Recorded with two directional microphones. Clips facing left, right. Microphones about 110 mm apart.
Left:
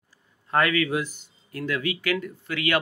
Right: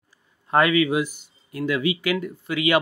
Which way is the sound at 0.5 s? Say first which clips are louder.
Right 4 dB; 15° right (ahead or behind).